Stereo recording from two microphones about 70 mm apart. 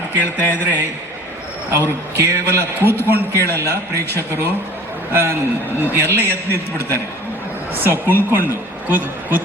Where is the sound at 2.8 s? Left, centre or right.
Left.